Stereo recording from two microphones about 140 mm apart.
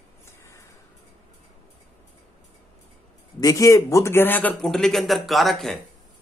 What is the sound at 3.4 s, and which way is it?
Speech, 25° left (ahead or behind).